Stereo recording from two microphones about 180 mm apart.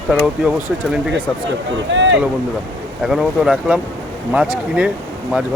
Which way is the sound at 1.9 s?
90° right.